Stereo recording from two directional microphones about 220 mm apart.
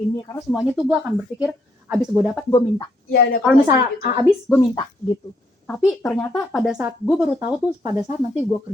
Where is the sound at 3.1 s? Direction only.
45° left (ahead or behind).